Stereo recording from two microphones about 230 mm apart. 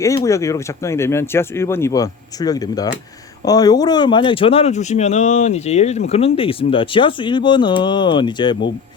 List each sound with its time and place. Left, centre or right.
0.0 s speech: centre